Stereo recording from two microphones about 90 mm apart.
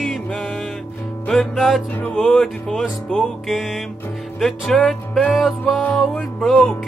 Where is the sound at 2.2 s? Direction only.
5° left (ahead or behind).